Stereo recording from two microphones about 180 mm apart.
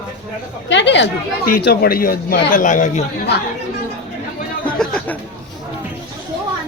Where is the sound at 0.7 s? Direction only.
75° left (ahead or behind).